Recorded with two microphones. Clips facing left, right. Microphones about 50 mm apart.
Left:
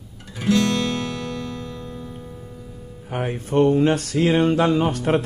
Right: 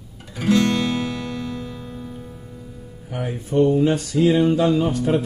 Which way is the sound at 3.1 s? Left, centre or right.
Left.